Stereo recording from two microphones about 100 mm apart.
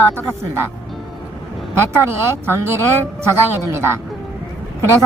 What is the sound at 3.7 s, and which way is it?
Speech, 25° right (ahead or behind).